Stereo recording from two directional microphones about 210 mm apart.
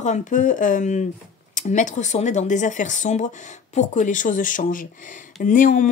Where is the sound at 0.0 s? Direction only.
35° left (ahead or behind).